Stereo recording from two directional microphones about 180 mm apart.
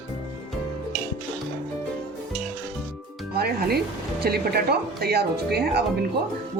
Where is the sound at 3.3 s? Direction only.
60° right (ahead or behind).